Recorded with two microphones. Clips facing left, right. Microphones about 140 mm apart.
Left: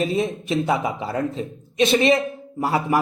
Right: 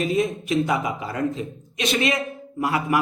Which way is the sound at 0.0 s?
30° left (ahead or behind).